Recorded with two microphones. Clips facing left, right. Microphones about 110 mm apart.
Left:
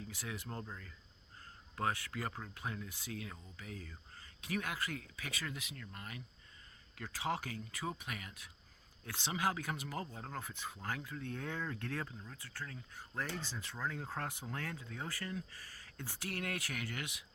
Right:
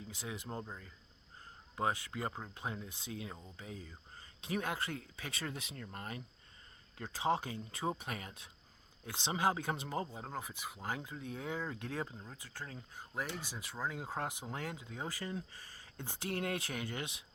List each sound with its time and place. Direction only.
0.1 s speech: 20° right (ahead or behind); by 6.2 s 35° right (ahead or behind)
6.9 s speech: 25° right (ahead or behind)